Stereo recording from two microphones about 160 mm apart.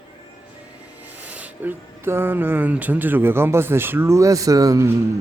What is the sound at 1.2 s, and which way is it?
Speech, 10° right (ahead or behind).